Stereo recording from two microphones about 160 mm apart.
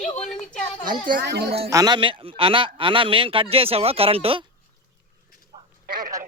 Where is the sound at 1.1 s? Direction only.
90° right.